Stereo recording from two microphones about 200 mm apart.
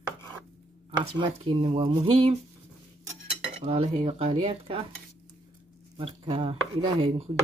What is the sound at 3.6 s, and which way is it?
Speech, 30° right (ahead or behind).